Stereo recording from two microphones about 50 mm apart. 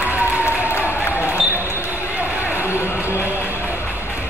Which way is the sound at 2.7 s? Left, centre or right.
Left.